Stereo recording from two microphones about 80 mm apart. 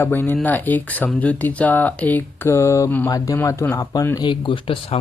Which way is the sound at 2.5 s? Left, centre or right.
Left.